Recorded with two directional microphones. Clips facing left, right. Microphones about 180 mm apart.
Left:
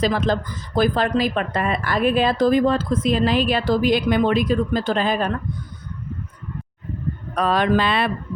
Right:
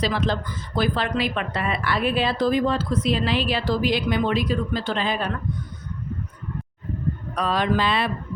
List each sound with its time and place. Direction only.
0.0 s speech: 45° left (ahead or behind)
7.3 s speech: 60° left (ahead or behind)